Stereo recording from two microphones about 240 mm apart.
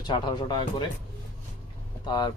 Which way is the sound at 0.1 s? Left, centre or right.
Centre.